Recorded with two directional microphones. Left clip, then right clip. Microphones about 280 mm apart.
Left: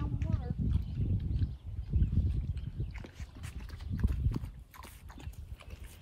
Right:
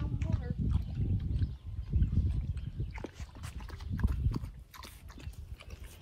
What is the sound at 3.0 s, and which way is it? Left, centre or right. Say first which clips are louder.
Dog: right 7 dB; centre.